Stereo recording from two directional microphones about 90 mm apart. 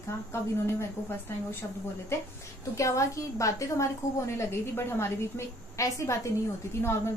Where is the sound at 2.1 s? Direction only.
30° left (ahead or behind).